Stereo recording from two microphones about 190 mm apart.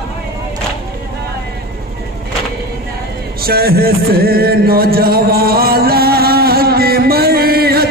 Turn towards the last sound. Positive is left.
turn(degrees=-55)  # may be behind; listen again after turning